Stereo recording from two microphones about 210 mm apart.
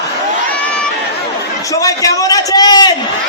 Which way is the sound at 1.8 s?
15° left (ahead or behind).